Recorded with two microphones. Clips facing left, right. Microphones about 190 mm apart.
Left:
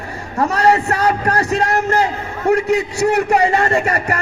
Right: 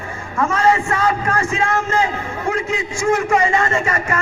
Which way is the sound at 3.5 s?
35° left (ahead or behind).